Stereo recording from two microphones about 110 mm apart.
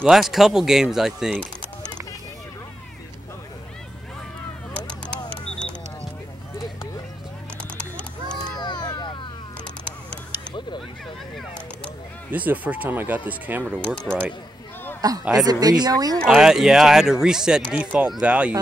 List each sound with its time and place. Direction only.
0.0 s speech: 5° right (ahead or behind)
5.3 s a sound: 10° left (ahead or behind)
7.7 s clip-clop: 10° left (ahead or behind)
8.5 s a sound: 40° left (ahead or behind)
11.3 s a sound: 10° left (ahead or behind)
12.3 s speech: 15° right (ahead or behind)
13.8 s speech: 10° left (ahead or behind)
15.0 s speech: 35° right (ahead or behind)
16.3 s speech: 5° right (ahead or behind)